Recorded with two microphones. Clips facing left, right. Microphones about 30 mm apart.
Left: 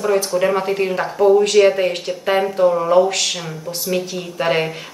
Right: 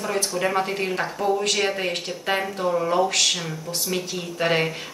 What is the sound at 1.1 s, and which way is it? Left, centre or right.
Speech, left.